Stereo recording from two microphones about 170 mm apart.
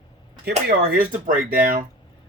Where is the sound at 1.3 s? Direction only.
55° right (ahead or behind).